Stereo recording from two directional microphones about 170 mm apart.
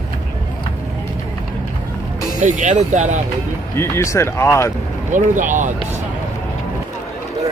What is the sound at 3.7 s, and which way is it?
Speech, 15° left (ahead or behind).